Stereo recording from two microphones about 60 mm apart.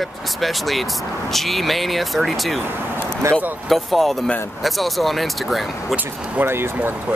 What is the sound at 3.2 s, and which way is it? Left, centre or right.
Speech, right.